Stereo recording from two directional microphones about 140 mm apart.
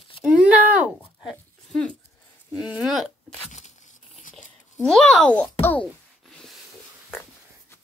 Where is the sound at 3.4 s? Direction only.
55° left (ahead or behind).